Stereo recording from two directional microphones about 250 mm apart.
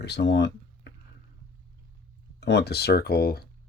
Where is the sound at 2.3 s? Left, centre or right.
Left.